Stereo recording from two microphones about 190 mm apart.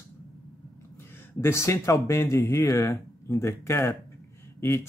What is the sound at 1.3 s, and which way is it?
Mantra, 15° left (ahead or behind).